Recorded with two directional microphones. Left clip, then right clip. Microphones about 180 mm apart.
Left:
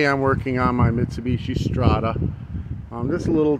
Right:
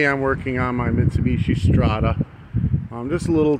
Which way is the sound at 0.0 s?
5° left (ahead or behind).